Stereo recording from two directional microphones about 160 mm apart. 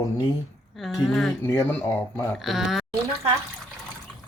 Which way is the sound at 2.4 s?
Centre (ahead or behind).